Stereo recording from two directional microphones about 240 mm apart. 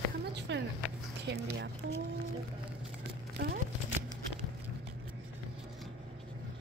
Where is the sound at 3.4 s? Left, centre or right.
Right.